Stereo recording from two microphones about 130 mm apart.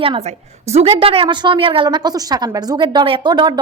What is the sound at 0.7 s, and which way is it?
A woman's voice, 50° right (ahead or behind).